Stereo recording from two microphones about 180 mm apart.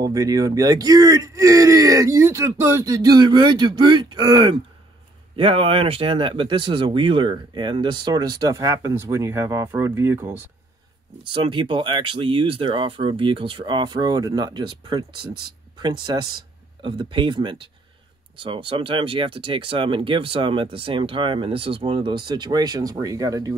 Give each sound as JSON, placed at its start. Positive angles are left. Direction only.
{"t": 0.0, "sound": "speech", "side_deg": -20}
{"t": 11.3, "sound": "speech", "side_deg": -30}